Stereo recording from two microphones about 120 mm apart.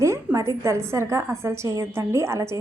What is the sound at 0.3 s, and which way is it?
A woman's voice, 25° right (ahead or behind).